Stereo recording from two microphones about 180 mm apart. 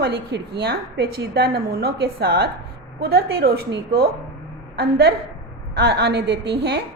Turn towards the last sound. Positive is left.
turn(degrees=-65)  # may be behind; listen again after turning